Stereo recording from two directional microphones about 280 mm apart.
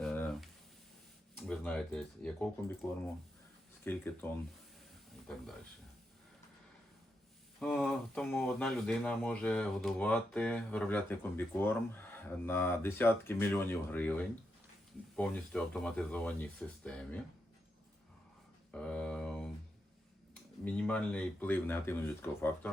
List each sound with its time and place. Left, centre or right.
0.0 s a sound: centre
1.4 s speech: centre
3.8 s speech: centre
7.6 s speech: centre
18.7 s a sound: centre
20.7 s speech: centre